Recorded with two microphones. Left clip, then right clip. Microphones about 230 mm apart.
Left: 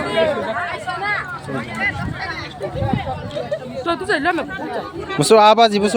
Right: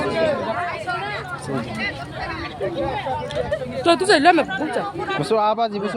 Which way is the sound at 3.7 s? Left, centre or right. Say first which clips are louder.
Right 5 dB; right.